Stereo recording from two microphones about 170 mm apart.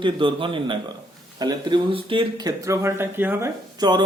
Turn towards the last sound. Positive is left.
turn(degrees=-25)  # may be behind; listen again after turning